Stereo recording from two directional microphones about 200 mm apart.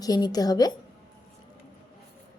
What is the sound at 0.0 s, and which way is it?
Speech, 20° left (ahead or behind).